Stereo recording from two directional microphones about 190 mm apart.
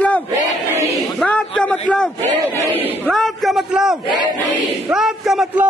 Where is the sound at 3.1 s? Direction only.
Centre (ahead or behind).